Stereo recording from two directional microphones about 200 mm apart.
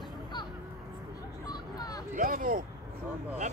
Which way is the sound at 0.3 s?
20° left (ahead or behind).